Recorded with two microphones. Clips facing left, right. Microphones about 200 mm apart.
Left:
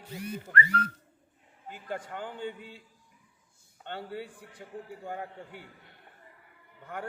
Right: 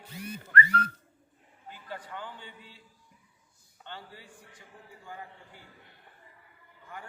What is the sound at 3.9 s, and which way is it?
A man's voice, 60° left (ahead or behind).